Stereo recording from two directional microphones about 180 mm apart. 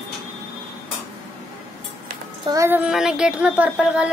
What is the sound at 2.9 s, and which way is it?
Child singing, 5° right (ahead or behind).